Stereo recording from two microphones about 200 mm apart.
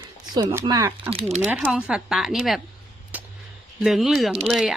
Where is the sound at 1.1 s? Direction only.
30° right (ahead or behind).